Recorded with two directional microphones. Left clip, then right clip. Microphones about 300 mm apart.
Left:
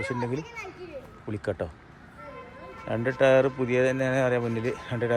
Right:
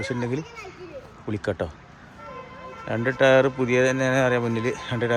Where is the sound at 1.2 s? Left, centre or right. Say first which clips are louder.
Right 4 dB; centre.